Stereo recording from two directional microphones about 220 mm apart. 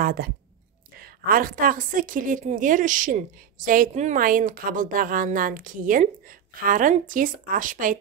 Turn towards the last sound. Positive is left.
turn(degrees=-35)  # may be behind; listen again after turning